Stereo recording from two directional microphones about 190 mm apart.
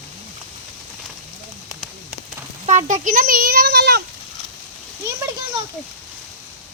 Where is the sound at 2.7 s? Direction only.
40° right (ahead or behind); by 4.0 s 55° right (ahead or behind).